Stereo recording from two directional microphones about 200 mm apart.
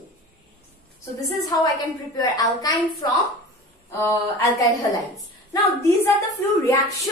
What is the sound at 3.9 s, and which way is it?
A woman's voice, 10° left (ahead or behind).